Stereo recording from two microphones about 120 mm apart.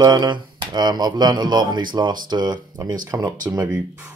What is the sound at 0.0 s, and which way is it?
Speech, 35° right (ahead or behind).